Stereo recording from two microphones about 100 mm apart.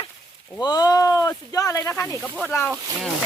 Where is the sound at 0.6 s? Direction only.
40° left (ahead or behind).